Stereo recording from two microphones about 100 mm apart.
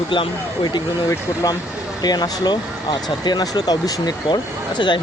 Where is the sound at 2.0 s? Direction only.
45° left (ahead or behind).